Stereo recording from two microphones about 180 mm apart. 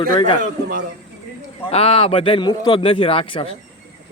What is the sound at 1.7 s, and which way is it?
A man's voice, 35° left (ahead or behind).